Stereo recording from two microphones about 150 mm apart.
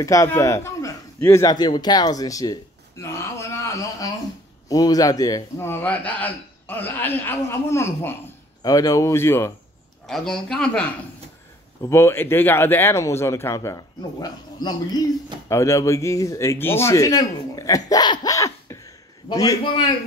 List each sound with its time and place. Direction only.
0.0 s a man's voice: 20° left (ahead or behind)
10.0 s a man's voice: 5° left (ahead or behind); by 19.8 s 30° left (ahead or behind)